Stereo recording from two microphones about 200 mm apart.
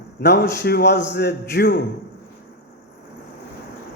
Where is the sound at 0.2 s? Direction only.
55° left (ahead or behind).